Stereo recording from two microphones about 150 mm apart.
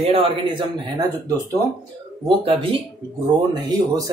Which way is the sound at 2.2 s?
35° right (ahead or behind).